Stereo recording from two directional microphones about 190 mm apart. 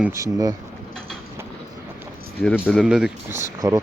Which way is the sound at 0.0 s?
15° right (ahead or behind).